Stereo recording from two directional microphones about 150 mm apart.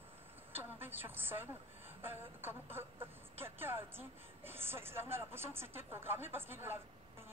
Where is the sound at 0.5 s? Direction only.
15° right (ahead or behind).